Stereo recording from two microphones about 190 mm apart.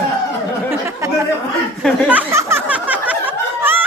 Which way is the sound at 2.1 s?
10° right (ahead or behind).